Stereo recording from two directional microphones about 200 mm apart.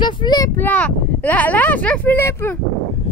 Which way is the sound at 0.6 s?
10° left (ahead or behind).